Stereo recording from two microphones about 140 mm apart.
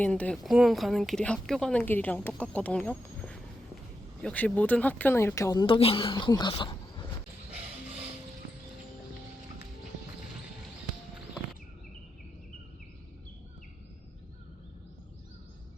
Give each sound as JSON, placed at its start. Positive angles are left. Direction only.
{"t": 0.0, "sound": "a woman's voice", "side_deg": 10}
{"t": 5.6, "sound": "speech", "side_deg": 40}
{"t": 6.5, "sound": "a sound", "side_deg": 35}